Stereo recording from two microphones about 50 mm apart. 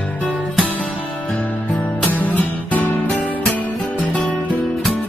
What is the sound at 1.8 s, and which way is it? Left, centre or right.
Music, left.